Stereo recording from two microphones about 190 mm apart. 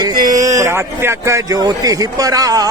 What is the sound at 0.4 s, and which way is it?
Speech, 15° right (ahead or behind).